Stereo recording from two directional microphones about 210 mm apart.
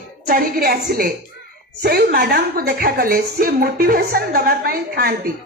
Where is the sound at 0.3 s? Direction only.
45° right (ahead or behind).